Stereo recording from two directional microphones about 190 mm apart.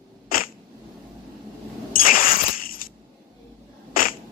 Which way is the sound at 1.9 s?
50° left (ahead or behind).